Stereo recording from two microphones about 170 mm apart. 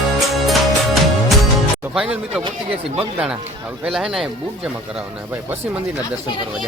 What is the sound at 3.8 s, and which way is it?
Speech, 5° right (ahead or behind).